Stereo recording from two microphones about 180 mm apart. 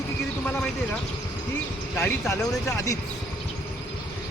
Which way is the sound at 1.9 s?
15° left (ahead or behind).